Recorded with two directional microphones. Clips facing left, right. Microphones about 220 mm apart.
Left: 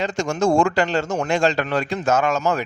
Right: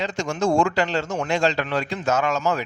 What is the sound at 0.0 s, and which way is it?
A man's voice, 45° left (ahead or behind).